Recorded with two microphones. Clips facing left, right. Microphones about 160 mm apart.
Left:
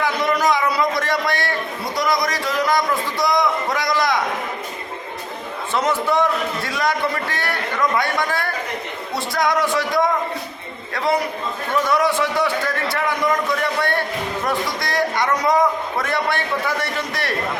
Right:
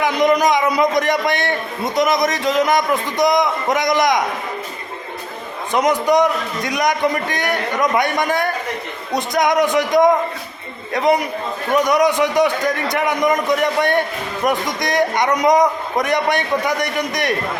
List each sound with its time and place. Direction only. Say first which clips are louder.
0.0 s a man's voice: right 4 dB; 20° right (ahead or behind)
5.7 s a man's voice: right 4 dB; 15° right (ahead or behind)